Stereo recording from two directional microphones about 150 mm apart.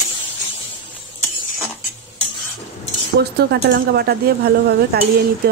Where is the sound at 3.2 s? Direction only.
90° right.